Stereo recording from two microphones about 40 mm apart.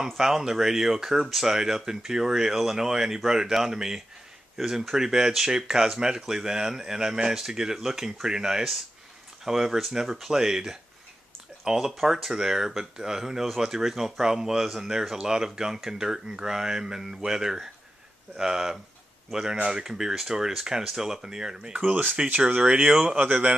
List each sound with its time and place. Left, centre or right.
0.2 s speech: centre
10.2 s speech: centre
21.8 s speech: right
22.6 s speech: right